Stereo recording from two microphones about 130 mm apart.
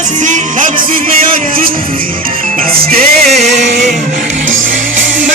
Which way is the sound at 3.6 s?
65° right (ahead or behind).